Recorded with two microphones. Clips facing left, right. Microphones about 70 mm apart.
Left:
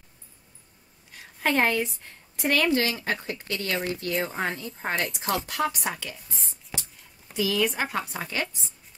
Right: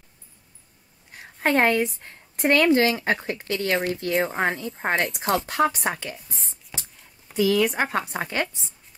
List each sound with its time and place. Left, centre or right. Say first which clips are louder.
1.1 s a woman's voice: right 3 dB; right
4.2 s speech: right 7 dB; right
4.7 s a woman's voice: right 5 dB; right
5.6 s speech: right 5 dB; right
7.3 s speech: right 5 dB; right